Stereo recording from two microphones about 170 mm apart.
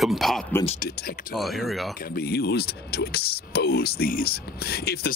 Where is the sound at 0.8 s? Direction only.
60° left (ahead or behind).